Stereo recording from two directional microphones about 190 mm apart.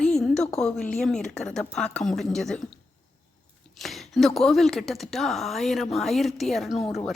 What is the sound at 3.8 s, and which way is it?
A woman's voice, centre (ahead or behind).